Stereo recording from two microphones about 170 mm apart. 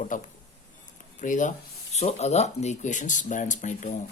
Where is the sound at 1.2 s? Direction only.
50° left (ahead or behind).